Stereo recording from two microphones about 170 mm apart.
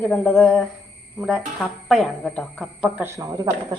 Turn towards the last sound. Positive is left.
turn(degrees=-25)  # may be behind; listen again after turning